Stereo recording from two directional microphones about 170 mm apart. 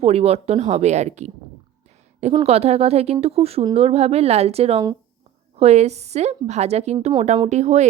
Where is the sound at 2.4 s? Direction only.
40° right (ahead or behind).